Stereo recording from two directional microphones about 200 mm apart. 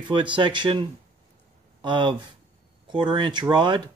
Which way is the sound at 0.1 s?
25° right (ahead or behind).